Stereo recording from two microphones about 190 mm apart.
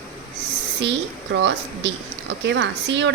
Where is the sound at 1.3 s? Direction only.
65° right (ahead or behind).